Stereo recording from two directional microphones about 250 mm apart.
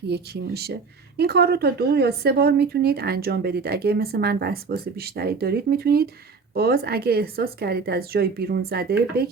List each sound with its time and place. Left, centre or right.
0.1 s speech: right